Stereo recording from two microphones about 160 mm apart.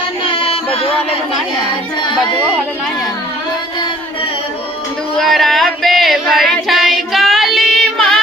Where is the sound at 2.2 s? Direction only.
30° left (ahead or behind).